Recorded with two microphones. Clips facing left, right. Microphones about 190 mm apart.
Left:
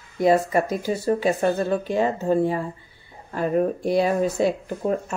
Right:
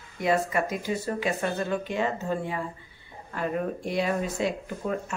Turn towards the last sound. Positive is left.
turn(degrees=40)  # may be behind; listen again after turning